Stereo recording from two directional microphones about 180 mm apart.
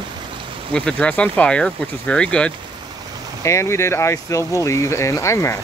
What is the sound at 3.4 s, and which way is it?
Speech, 15° left (ahead or behind).